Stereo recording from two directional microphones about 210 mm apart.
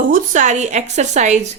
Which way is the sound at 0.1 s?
35° right (ahead or behind).